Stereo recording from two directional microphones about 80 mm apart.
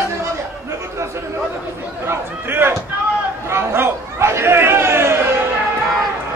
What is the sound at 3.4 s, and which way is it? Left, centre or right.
Chatter, right.